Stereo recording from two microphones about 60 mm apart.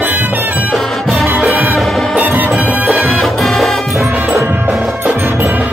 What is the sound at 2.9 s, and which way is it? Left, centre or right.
Music, centre.